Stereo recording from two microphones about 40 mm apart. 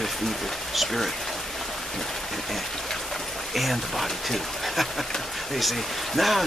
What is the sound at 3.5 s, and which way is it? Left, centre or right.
Speech, centre.